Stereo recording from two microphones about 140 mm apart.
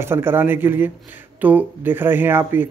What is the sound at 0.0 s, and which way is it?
Speech, 15° right (ahead or behind).